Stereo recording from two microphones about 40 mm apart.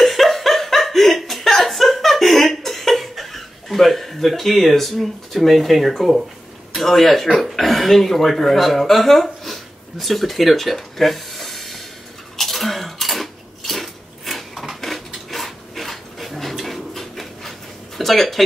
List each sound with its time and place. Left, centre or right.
0.0 s chuckle: centre
6.7 s speech: centre
12.4 s cutlery: centre
16.6 s pant: centre